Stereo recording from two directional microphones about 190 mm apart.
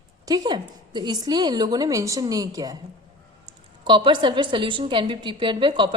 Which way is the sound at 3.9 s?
25° right (ahead or behind).